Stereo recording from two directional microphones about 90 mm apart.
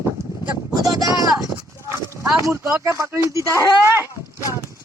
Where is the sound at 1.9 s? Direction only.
30° right (ahead or behind).